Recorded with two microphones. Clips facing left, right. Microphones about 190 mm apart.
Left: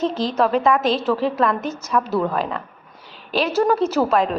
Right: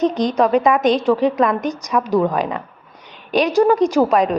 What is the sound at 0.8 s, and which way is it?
Speech, centre (ahead or behind).